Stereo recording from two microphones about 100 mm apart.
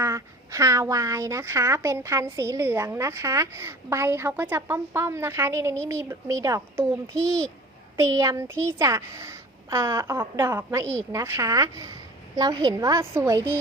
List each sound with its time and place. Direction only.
0.0 s a woman's voice: 30° right (ahead or behind)
12.4 s a woman's voice: 45° right (ahead or behind)